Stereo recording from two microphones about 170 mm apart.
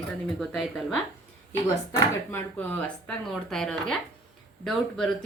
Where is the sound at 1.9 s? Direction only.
20° left (ahead or behind); by 5.1 s 5° left (ahead or behind).